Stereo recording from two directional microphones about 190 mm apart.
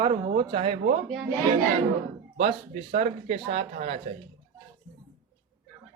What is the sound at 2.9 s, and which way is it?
Speech, 35° right (ahead or behind).